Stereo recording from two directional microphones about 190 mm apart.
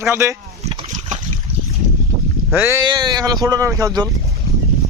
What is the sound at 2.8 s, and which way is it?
Speech, 20° right (ahead or behind).